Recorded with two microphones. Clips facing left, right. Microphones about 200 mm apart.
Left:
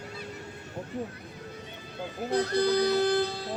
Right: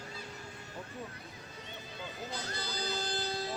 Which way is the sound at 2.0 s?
60° left (ahead or behind).